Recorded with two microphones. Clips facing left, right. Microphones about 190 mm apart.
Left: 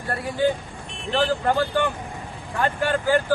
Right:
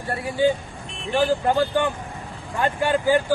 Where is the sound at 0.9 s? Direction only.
Centre (ahead or behind).